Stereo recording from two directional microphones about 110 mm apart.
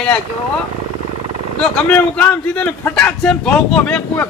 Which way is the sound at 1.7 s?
10° left (ahead or behind).